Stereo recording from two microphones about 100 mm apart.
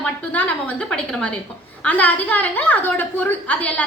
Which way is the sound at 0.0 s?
15° left (ahead or behind).